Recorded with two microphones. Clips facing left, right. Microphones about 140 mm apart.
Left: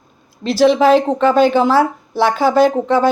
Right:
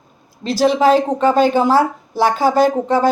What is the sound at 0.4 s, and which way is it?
Speech, 40° right (ahead or behind).